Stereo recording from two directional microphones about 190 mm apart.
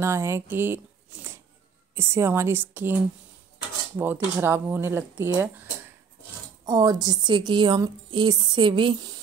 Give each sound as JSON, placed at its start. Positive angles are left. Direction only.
{"t": 0.0, "sound": "speech", "side_deg": -15}
{"t": 4.0, "sound": "speech", "side_deg": -10}
{"t": 6.6, "sound": "a woman's voice", "side_deg": -20}